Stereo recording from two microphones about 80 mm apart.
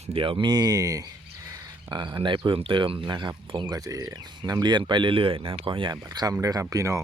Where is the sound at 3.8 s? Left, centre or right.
Right.